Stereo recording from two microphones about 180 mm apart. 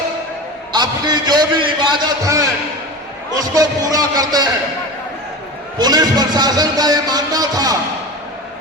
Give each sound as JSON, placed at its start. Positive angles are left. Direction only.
{"t": 0.7, "sound": "music", "side_deg": -20}
{"t": 3.5, "sound": "music", "side_deg": -20}
{"t": 5.8, "sound": "music", "side_deg": -20}